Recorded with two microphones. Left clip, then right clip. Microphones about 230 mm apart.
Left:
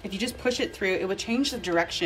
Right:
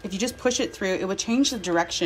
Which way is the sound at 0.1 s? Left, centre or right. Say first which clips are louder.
Right 3 dB; centre.